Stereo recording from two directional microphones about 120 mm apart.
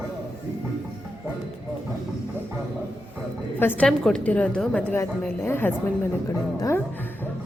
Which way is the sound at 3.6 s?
15° left (ahead or behind).